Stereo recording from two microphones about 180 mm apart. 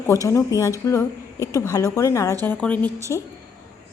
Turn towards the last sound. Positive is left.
turn(degrees=15)  # may be behind; listen again after turning